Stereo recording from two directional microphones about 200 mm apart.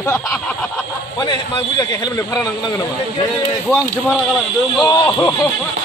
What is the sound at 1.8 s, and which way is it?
Speech, 20° left (ahead or behind).